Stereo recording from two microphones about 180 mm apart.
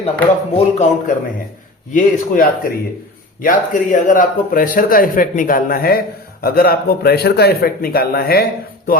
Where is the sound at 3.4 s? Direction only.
45° left (ahead or behind).